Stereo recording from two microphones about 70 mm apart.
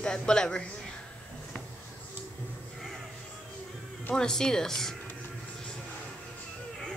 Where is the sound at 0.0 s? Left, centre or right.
Centre.